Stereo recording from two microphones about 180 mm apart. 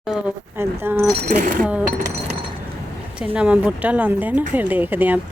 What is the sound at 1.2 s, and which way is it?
Speech, 45° right (ahead or behind).